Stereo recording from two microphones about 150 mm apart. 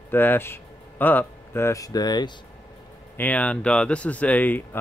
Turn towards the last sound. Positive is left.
turn(degrees=10)  # may be behind; listen again after turning